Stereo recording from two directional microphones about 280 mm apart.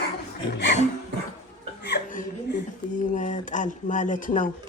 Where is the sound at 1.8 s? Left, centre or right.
Left.